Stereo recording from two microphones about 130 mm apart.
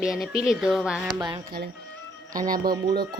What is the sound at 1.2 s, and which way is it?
Speech, 35° right (ahead or behind).